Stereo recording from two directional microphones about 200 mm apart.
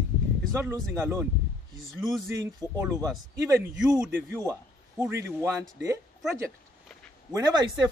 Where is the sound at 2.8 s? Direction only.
15° right (ahead or behind).